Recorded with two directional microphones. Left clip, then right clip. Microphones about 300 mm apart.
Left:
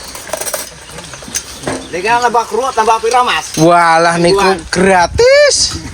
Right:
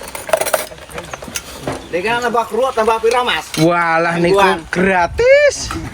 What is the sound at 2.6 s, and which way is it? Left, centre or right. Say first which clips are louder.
Speech: left 1 dB; centre.